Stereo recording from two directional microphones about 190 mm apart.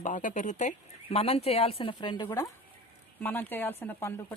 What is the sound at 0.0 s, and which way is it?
Speech, 40° left (ahead or behind).